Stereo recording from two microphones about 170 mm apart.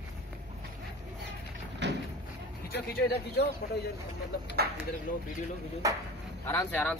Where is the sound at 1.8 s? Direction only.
90° right.